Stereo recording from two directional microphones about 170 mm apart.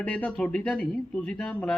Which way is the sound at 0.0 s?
10° left (ahead or behind).